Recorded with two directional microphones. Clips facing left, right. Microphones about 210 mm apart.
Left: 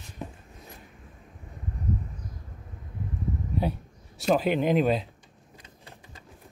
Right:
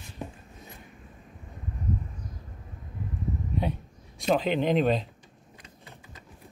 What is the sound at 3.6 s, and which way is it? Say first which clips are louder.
Speech: left 3 dB; 5° left (ahead or behind).